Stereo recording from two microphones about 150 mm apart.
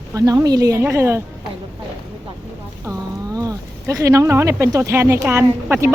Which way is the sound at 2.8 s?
20° right (ahead or behind).